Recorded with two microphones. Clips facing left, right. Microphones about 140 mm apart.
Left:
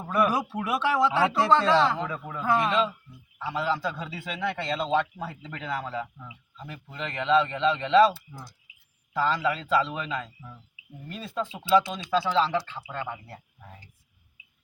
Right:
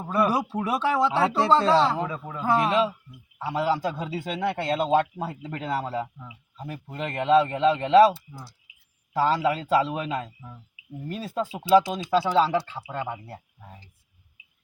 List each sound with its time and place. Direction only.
0.1 s speech: 30° right (ahead or behind)
2.0 s speech: 20° right (ahead or behind)
2.6 s speech: 5° right (ahead or behind)
3.8 s a man's voice: 40° right (ahead or behind)
8.0 s speech: 5° right (ahead or behind)
9.1 s a man's voice: 40° right (ahead or behind)
12.5 s speech: 30° right (ahead or behind)
13.2 s speech: 10° right (ahead or behind)